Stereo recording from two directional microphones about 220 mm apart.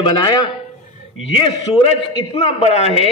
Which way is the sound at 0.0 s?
20° left (ahead or behind).